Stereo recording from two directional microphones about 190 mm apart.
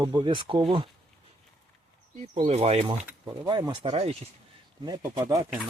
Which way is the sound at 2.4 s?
35° right (ahead or behind).